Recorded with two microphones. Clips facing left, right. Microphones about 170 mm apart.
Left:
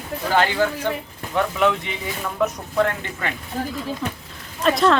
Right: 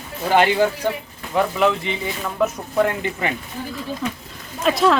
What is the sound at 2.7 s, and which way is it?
Speech, 10° right (ahead or behind).